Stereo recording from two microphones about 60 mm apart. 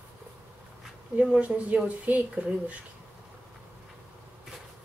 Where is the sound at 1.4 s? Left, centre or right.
Right.